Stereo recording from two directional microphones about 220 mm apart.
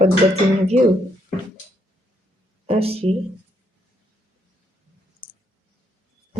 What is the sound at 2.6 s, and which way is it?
Speech, 25° right (ahead or behind).